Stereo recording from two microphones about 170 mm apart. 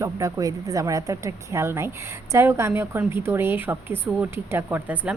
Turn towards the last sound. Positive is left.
turn(degrees=-10)  # may be behind; listen again after turning